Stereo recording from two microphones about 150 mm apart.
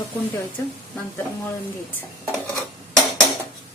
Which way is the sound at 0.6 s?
15° left (ahead or behind).